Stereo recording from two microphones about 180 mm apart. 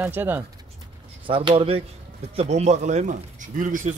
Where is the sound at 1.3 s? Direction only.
30° right (ahead or behind).